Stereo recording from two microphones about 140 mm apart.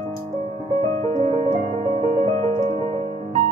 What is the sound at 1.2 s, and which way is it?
Music, 40° right (ahead or behind).